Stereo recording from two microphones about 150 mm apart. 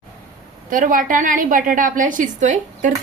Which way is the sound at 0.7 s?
65° right (ahead or behind).